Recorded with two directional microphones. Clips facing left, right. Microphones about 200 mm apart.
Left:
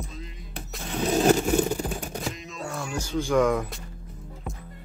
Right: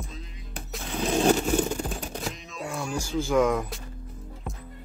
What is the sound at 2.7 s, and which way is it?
Music, centre (ahead or behind).